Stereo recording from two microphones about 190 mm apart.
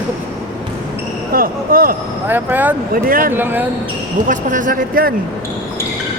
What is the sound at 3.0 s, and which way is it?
Speech, 50° right (ahead or behind).